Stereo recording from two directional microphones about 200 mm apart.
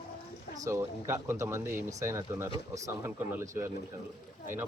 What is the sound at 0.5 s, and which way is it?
Speech, 15° right (ahead or behind).